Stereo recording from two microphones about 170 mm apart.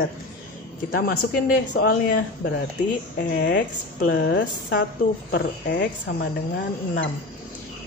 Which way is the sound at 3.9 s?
70° left (ahead or behind).